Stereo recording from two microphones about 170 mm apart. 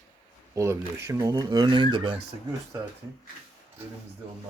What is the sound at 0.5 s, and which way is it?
Speech, 15° right (ahead or behind).